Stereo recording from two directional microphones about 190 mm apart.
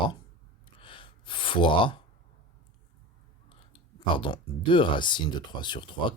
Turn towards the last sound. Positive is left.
turn(degrees=25)  # may be behind; listen again after turning